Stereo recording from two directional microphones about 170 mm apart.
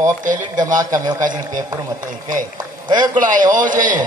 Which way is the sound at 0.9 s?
20° right (ahead or behind).